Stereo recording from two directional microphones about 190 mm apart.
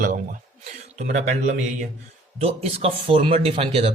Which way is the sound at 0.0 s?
45° right (ahead or behind).